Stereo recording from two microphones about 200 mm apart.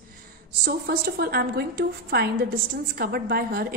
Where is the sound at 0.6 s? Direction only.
50° right (ahead or behind).